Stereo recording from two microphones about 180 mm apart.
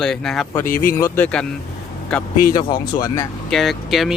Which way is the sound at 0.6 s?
50° left (ahead or behind).